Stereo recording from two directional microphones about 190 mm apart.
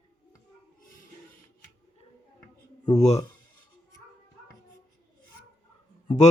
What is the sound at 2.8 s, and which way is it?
Speech, 35° left (ahead or behind).